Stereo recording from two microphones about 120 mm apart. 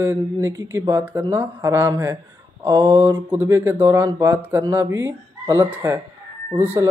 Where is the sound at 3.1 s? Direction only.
15° right (ahead or behind).